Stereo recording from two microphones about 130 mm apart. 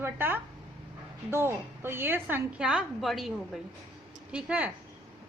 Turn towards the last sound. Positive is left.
turn(degrees=-10)  # may be behind; listen again after turning